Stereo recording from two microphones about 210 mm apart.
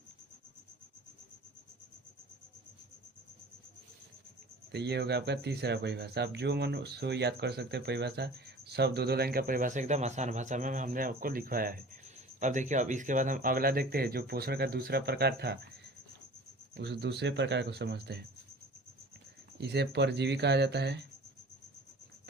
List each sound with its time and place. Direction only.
4.7 s speech: 50° right (ahead or behind)
16.7 s speech: 55° right (ahead or behind)
19.5 s speech: 50° right (ahead or behind)